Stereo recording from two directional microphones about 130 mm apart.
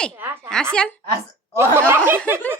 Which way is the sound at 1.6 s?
20° right (ahead or behind).